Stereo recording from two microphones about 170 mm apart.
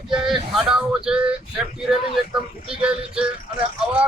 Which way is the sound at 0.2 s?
Centre (ahead or behind).